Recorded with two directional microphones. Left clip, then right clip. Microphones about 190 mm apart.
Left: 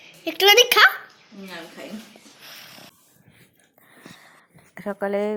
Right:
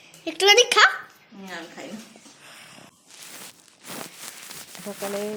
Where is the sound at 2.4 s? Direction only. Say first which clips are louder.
Left 4 dB; centre (ahead or behind).